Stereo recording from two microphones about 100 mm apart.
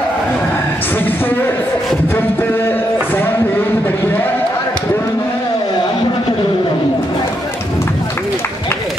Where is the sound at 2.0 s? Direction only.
20° left (ahead or behind).